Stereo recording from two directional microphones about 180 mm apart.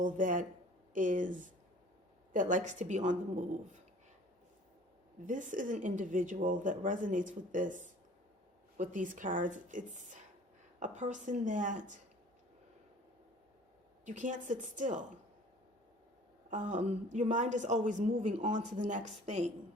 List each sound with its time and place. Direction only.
0.0 s a woman's voice: 45° right (ahead or behind)
5.2 s speech: 45° right (ahead or behind)
14.0 s speech: 45° right (ahead or behind)
16.5 s a woman's voice: 45° right (ahead or behind)